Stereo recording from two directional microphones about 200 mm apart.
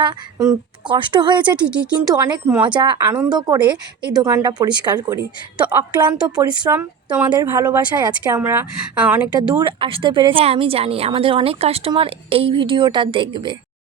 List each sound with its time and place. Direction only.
0.0 s speech: 20° right (ahead or behind)
1.6 s speech: 5° right (ahead or behind)
2.6 s a woman's voice: 20° right (ahead or behind)
9.6 s speech: 25° right (ahead or behind)